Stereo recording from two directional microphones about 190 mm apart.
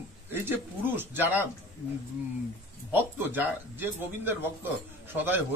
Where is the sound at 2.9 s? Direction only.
10° right (ahead or behind).